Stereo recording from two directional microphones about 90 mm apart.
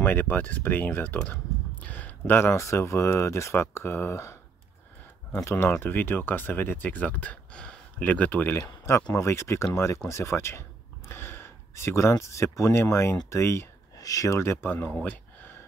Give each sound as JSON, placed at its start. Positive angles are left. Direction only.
{"t": 0.0, "sound": "speech", "side_deg": 20}
{"t": 9.1, "sound": "speech", "side_deg": 30}
{"t": 11.1, "sound": "a sound", "side_deg": 25}
{"t": 12.5, "sound": "speech", "side_deg": 30}